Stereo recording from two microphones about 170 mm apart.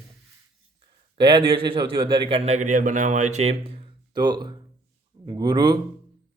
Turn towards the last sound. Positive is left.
turn(degrees=-25)  # may be behind; listen again after turning